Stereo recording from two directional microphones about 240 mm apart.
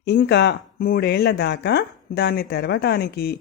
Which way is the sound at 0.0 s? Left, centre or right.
Left.